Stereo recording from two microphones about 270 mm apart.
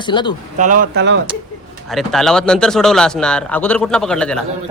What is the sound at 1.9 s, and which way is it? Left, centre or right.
Speech, centre.